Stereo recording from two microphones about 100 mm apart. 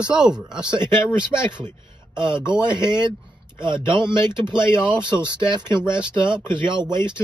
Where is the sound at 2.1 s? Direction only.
50° right (ahead or behind).